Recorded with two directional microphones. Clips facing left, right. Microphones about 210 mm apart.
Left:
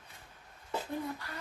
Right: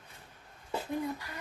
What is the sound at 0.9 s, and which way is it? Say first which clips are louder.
Speech: right 6 dB; 15° right (ahead or behind).